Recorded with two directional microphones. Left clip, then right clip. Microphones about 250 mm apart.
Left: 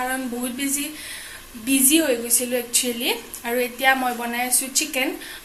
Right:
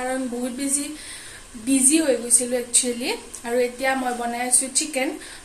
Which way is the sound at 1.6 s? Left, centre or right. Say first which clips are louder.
Even; centre.